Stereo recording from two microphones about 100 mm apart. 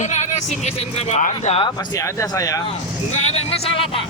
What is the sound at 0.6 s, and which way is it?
Speech, 90° left.